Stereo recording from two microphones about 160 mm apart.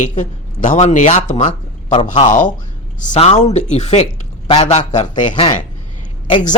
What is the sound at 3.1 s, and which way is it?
A man's voice, 40° left (ahead or behind).